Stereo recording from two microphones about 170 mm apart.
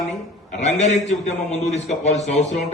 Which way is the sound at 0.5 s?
40° left (ahead or behind).